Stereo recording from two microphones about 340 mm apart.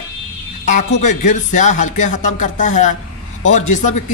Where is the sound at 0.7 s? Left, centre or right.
Left.